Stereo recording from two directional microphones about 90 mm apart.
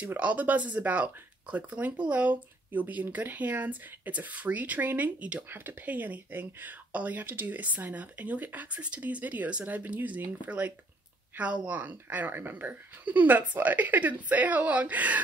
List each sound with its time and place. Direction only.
0.0 s speech: 15° right (ahead or behind)